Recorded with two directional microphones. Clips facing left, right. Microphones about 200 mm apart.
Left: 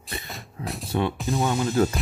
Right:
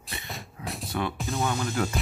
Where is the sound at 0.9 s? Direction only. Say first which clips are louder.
Left 5 dB; 25° left (ahead or behind).